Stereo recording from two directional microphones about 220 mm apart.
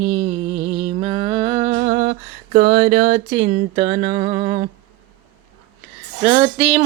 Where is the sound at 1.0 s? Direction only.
25° right (ahead or behind).